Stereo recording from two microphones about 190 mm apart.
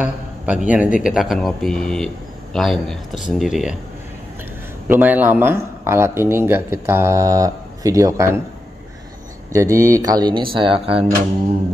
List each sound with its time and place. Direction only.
0.0 s a man's voice: 5° right (ahead or behind)
4.8 s speech: 10° right (ahead or behind)
9.5 s speech: 15° right (ahead or behind)